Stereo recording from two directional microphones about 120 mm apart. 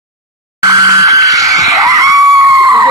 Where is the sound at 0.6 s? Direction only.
30° right (ahead or behind).